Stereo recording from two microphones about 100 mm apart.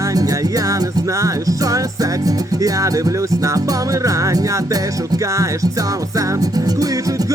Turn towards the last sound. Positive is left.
turn(degrees=-35)  # may be behind; listen again after turning